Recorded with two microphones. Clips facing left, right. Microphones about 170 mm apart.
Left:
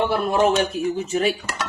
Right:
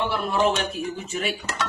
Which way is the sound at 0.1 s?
45° left (ahead or behind).